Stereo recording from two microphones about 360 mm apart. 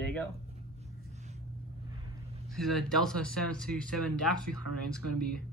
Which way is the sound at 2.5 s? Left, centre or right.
Centre.